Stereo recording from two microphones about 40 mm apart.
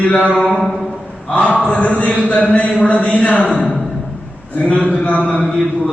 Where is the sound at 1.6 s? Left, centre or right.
Left.